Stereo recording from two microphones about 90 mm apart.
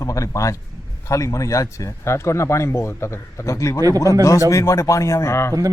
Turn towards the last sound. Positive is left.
turn(degrees=30)  # may be behind; listen again after turning